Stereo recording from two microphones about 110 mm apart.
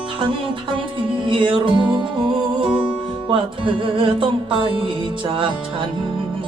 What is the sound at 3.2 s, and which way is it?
Music, 50° right (ahead or behind).